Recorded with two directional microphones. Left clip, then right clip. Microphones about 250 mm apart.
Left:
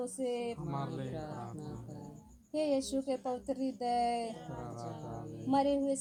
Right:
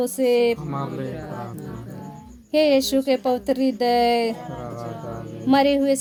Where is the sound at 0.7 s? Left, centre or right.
Left.